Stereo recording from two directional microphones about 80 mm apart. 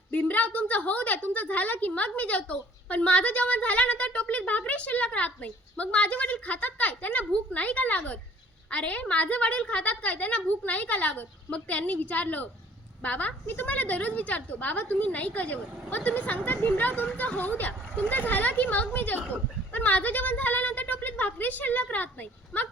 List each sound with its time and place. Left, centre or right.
0.1 s a woman's voice: centre